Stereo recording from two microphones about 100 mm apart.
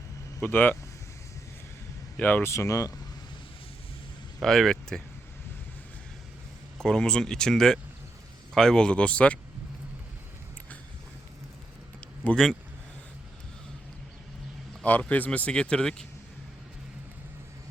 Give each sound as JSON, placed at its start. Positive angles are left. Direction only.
{"t": 0.4, "sound": "speech", "side_deg": 20}
{"t": 2.1, "sound": "speech", "side_deg": 15}
{"t": 2.5, "sound": "speech", "side_deg": 30}
{"t": 4.4, "sound": "speech", "side_deg": 5}
{"t": 6.7, "sound": "speech", "side_deg": 5}
{"t": 11.9, "sound": "a sound", "side_deg": 15}
{"t": 14.8, "sound": "speech", "side_deg": 15}